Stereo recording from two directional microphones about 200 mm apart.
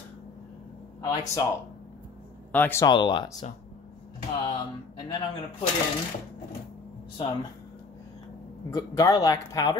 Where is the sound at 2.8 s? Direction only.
25° left (ahead or behind).